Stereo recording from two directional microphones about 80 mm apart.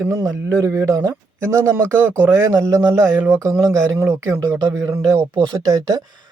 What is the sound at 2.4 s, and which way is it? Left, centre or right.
Speech, right.